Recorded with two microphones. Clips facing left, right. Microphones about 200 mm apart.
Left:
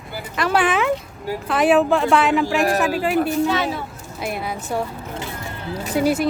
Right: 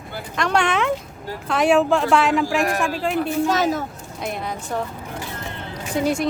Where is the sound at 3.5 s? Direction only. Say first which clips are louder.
Right 2 dB; 40° right (ahead or behind).